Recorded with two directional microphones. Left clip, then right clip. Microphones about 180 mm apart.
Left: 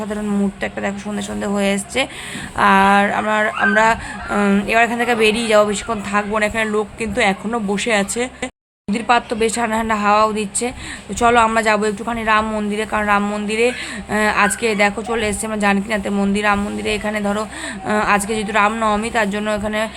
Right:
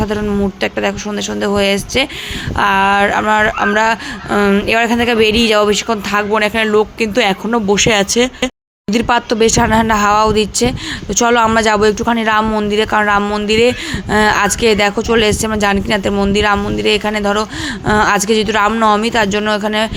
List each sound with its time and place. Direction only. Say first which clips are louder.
0.0 s speech: right 6 dB; 20° right (ahead or behind)